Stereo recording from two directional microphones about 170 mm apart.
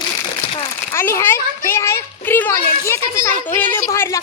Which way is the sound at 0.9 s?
15° left (ahead or behind).